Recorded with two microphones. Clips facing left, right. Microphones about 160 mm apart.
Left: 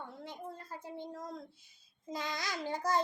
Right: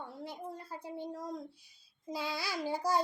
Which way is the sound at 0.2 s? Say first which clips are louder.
Right 2 dB; 15° right (ahead or behind).